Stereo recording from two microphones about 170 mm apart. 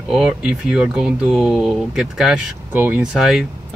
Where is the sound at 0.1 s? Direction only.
Centre (ahead or behind).